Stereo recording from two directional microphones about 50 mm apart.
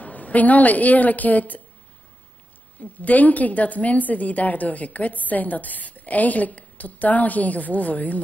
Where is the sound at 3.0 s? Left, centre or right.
Left.